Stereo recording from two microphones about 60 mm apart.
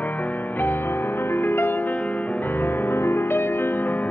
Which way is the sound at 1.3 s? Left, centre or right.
Left.